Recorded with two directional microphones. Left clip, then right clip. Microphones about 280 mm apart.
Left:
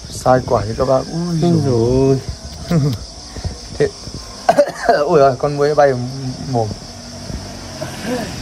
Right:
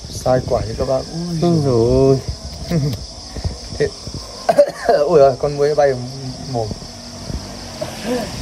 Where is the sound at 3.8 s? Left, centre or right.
Centre.